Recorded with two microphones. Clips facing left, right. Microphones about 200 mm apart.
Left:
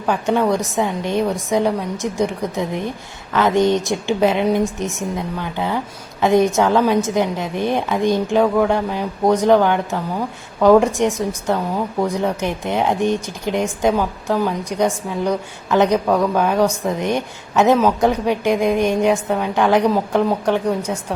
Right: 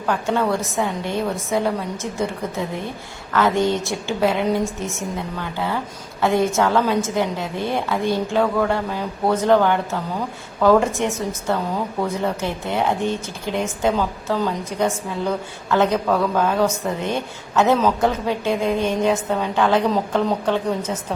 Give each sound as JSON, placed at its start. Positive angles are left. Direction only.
{"t": 0.0, "sound": "a woman's voice", "side_deg": 15}